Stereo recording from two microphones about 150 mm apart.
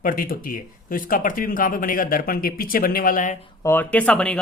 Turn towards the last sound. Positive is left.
turn(degrees=5)  # may be behind; listen again after turning